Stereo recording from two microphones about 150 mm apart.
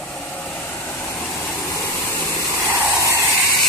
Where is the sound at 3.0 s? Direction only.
20° right (ahead or behind).